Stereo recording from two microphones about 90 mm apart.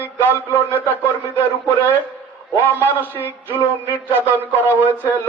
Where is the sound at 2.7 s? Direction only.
20° right (ahead or behind).